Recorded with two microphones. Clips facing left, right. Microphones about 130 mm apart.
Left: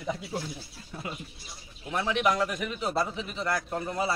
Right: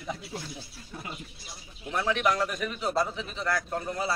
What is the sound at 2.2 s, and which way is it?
A man's voice, 15° left (ahead or behind).